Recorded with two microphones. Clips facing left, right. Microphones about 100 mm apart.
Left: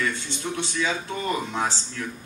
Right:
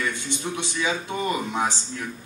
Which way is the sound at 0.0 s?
15° right (ahead or behind).